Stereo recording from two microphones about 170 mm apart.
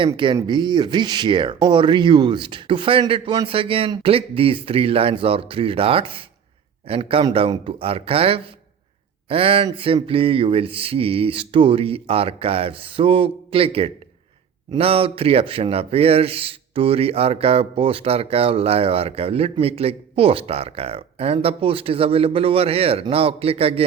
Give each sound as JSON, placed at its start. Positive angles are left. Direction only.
{"t": 0.3, "sound": "speech", "side_deg": -25}